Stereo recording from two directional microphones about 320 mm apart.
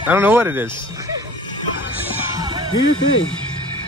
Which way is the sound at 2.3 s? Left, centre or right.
Centre.